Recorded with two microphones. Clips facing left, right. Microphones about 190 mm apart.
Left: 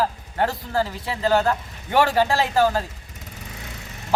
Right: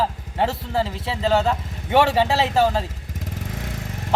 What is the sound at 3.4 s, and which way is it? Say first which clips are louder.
Vehicle: right 4 dB; 50° right (ahead or behind).